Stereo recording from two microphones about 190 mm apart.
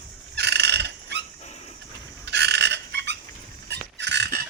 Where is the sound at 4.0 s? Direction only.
65° right (ahead or behind).